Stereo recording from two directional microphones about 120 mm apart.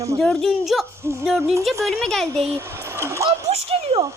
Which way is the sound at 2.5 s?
20° right (ahead or behind).